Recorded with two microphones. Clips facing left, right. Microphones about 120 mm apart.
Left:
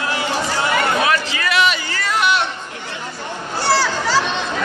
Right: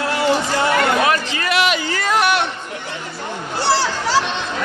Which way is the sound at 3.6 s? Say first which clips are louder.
Even; 25° right (ahead or behind).